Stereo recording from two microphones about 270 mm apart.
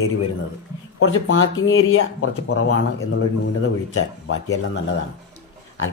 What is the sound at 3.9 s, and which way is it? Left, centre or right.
Speech, left.